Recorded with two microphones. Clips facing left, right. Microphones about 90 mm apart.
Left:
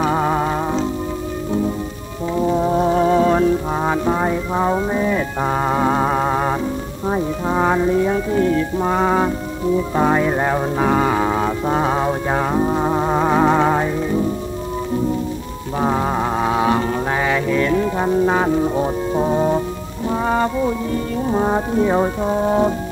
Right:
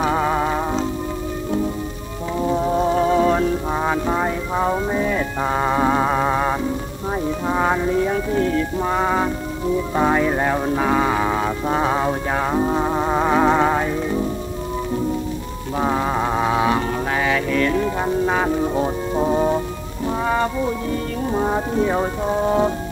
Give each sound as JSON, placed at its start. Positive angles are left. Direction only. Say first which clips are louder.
{"t": 0.0, "sound": "music", "louder": "left 1 dB", "side_deg": 10}
{"t": 2.3, "sound": "music", "louder": "left 2 dB", "side_deg": 10}
{"t": 3.1, "sound": "music", "louder": "left 1 dB", "side_deg": 25}
{"t": 3.3, "sound": "music", "louder": "left 3 dB", "side_deg": 15}
{"t": 4.7, "sound": "speech", "louder": "left 2 dB", "side_deg": 5}
{"t": 5.8, "sound": "a sound", "louder": "even", "side_deg": 15}
{"t": 7.1, "sound": "music", "louder": "left 2 dB", "side_deg": 5}
{"t": 8.8, "sound": "music", "louder": "left 4 dB", "side_deg": 20}
{"t": 10.1, "sound": "music", "louder": "left 1 dB", "side_deg": 10}
{"t": 11.6, "sound": "music", "louder": "even", "side_deg": 10}
{"t": 16.6, "sound": "music", "louder": "left 2 dB", "side_deg": 20}
{"t": 21.5, "sound": "music", "louder": "left 3 dB", "side_deg": 10}